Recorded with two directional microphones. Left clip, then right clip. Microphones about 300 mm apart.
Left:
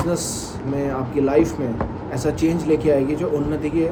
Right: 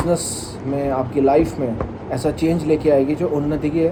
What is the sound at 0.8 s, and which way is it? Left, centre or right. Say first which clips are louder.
Speech: right 3 dB; centre.